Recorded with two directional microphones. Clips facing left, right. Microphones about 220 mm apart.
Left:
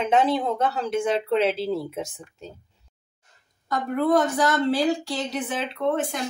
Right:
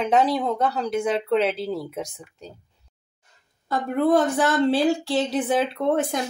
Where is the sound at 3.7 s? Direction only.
30° right (ahead or behind).